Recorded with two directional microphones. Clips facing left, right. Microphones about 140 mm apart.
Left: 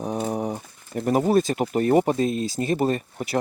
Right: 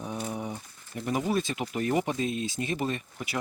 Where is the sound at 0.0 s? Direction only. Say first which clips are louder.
Left 8 dB; 40° left (ahead or behind).